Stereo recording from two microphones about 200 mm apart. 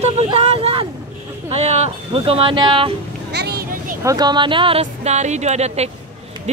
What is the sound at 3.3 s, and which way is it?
Vehicle, 55° right (ahead or behind).